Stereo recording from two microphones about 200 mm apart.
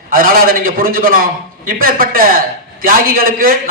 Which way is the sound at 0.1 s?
45° right (ahead or behind).